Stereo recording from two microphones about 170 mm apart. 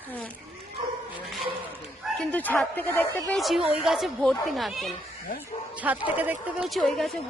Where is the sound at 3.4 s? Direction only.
Centre (ahead or behind).